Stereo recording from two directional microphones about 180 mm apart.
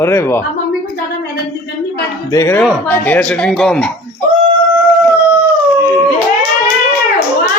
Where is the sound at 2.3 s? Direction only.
15° left (ahead or behind).